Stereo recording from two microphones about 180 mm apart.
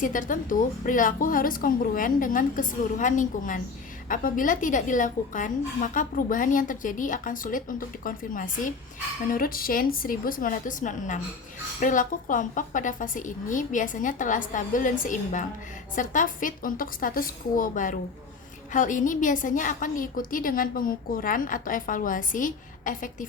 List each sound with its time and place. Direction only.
0.0 s a woman's voice: 45° left (ahead or behind)